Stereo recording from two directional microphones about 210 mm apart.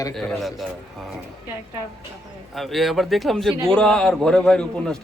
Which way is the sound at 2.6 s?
Centre (ahead or behind).